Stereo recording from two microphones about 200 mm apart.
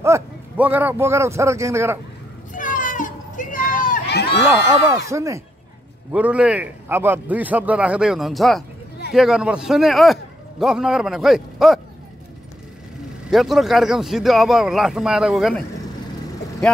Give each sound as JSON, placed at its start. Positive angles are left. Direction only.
{"t": 0.0, "sound": "a man's voice", "side_deg": -10}
{"t": 2.5, "sound": "children playing", "side_deg": 40}
{"t": 4.5, "sound": "a man's voice", "side_deg": -15}
{"t": 13.3, "sound": "a man's voice", "side_deg": 0}